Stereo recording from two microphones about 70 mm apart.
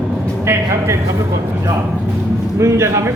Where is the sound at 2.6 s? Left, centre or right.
Right.